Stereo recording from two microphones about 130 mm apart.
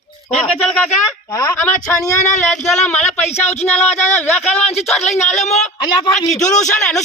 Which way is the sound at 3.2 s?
55° left (ahead or behind).